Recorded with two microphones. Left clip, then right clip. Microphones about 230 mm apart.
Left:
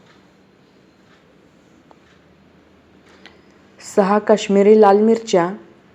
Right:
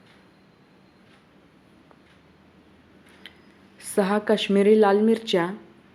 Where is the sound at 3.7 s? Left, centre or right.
Centre.